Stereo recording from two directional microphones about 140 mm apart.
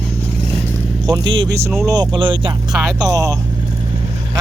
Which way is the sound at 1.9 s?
30° right (ahead or behind).